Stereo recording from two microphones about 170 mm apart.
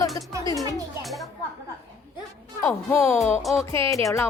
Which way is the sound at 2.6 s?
15° left (ahead or behind).